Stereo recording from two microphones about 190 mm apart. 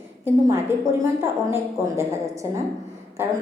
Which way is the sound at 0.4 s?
15° right (ahead or behind).